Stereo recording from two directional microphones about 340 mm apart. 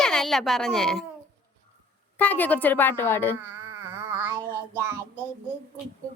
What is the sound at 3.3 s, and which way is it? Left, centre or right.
Music, centre.